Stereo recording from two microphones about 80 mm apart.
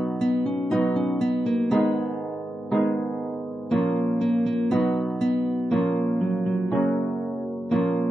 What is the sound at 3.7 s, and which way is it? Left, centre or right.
Music, centre.